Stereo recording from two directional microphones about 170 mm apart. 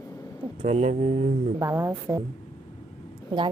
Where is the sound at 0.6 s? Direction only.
40° right (ahead or behind).